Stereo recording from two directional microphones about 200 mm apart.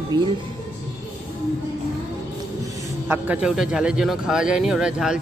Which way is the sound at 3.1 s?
5° right (ahead or behind).